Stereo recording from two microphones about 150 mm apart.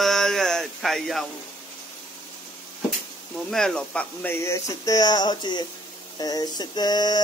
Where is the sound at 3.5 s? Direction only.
5° left (ahead or behind).